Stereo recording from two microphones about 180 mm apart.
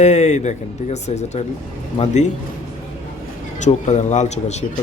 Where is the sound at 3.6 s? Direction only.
40° left (ahead or behind).